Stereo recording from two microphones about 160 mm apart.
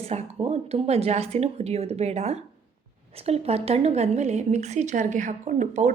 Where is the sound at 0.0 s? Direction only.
40° right (ahead or behind).